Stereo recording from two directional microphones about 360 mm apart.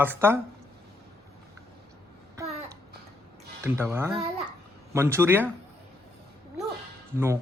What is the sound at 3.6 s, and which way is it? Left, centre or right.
Speech, centre.